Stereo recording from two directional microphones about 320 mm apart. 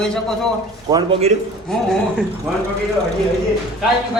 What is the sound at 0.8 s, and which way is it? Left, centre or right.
Speech, centre.